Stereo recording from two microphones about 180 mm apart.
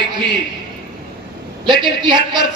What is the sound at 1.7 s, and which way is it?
Speech, 25° right (ahead or behind).